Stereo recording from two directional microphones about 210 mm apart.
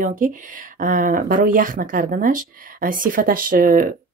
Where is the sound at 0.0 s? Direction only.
40° right (ahead or behind).